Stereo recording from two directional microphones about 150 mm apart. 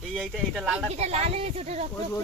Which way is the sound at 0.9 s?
45° right (ahead or behind).